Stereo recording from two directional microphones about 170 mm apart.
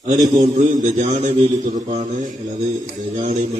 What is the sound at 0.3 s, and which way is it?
A man's voice, 45° right (ahead or behind).